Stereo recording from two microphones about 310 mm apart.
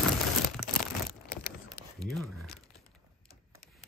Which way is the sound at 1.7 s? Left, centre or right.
Centre.